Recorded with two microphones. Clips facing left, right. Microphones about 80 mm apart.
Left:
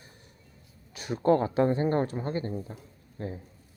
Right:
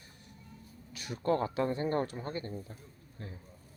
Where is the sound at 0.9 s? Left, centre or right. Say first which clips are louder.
Left 7 dB; left.